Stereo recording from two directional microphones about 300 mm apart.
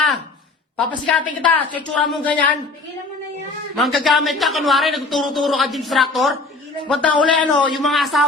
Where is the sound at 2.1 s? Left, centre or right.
Centre.